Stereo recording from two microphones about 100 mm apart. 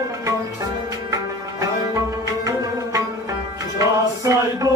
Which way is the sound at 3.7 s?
35° right (ahead or behind).